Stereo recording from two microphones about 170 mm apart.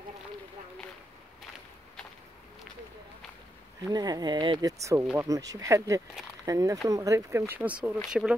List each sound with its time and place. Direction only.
3.9 s speech: 25° right (ahead or behind); by 8.4 s 5° right (ahead or behind)